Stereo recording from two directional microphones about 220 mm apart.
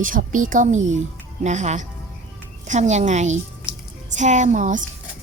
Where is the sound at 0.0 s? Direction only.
35° right (ahead or behind).